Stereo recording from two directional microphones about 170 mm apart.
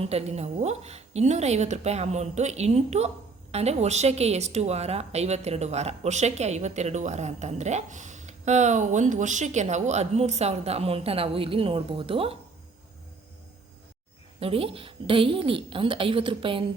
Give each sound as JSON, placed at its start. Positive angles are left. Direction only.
{"t": 0.0, "sound": "a woman's voice", "side_deg": -40}
{"t": 14.3, "sound": "a woman's voice", "side_deg": -35}